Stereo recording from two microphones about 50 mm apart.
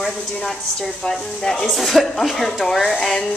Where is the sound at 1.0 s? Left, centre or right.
Centre.